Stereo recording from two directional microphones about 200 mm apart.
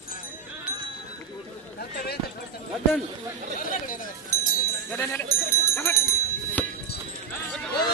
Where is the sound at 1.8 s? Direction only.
50° left (ahead or behind).